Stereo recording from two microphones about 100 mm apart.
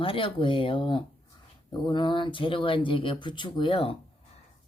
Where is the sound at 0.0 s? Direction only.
60° left (ahead or behind).